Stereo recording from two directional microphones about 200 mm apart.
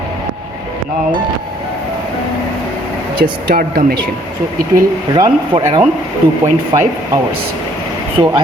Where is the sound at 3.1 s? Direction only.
45° right (ahead or behind).